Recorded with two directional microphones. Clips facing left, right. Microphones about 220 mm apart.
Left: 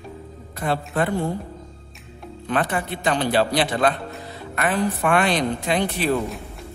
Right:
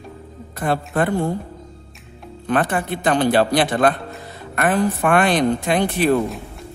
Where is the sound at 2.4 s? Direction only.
50° right (ahead or behind).